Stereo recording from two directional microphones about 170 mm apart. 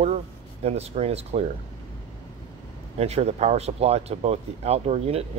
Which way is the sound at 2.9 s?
35° right (ahead or behind).